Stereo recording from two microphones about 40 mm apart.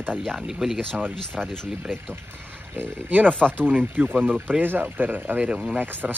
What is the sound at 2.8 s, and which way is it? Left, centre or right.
Speech, right.